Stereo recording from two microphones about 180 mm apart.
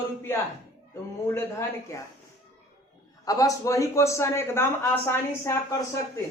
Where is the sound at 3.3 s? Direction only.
20° left (ahead or behind).